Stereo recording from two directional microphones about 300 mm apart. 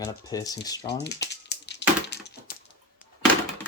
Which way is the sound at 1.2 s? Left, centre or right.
Left.